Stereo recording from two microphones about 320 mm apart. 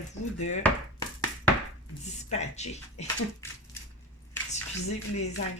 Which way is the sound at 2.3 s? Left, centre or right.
Left.